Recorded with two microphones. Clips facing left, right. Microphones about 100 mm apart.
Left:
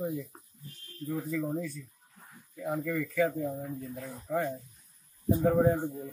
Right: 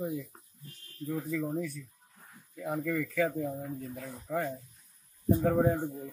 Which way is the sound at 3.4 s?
Centre (ahead or behind).